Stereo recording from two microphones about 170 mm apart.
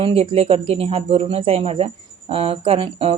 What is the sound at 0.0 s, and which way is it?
A woman's voice, 35° right (ahead or behind).